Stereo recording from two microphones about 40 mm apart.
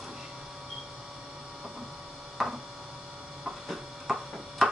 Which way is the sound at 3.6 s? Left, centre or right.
Centre.